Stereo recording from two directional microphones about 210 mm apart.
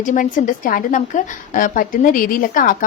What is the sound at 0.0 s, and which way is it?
Speech, 40° left (ahead or behind).